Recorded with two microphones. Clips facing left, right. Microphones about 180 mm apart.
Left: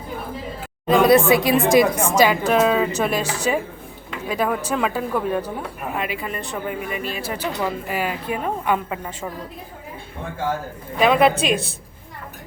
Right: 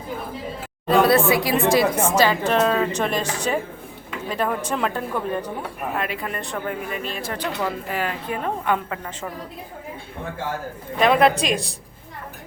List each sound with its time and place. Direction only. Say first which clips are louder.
0.9 s a woman's voice: left 3 dB; 15° left (ahead or behind)
11.0 s a woman's voice: left 1 dB; 5° left (ahead or behind)